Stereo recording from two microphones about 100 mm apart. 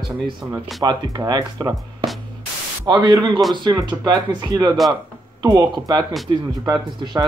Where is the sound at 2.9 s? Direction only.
50° right (ahead or behind).